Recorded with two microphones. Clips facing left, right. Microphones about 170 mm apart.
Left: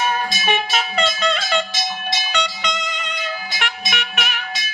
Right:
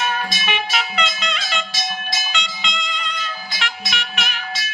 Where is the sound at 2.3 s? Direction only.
40° left (ahead or behind).